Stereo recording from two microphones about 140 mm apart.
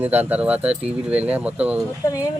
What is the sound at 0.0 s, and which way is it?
Speech, 10° right (ahead or behind).